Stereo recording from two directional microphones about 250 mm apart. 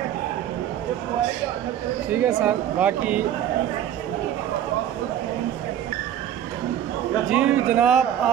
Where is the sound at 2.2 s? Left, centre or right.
Centre.